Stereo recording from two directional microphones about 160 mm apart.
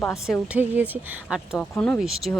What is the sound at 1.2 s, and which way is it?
Speech, centre (ahead or behind).